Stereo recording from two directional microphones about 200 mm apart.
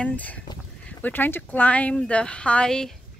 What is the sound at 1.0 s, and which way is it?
Speech, 10° left (ahead or behind).